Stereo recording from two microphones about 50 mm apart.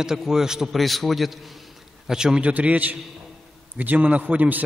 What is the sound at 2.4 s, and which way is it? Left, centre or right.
A man's voice, right.